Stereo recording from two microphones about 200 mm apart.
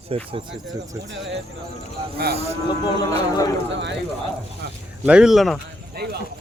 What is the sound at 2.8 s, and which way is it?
Speech, 20° left (ahead or behind).